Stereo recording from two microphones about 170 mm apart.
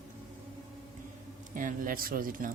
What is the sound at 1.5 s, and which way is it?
Speech, 50° right (ahead or behind).